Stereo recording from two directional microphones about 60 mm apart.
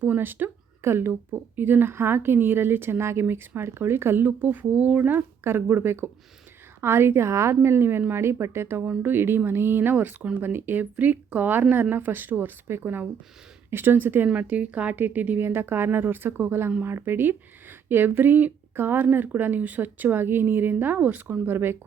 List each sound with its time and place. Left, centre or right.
0.0 s speech: right
14.3 s speech: right
15.4 s speech: right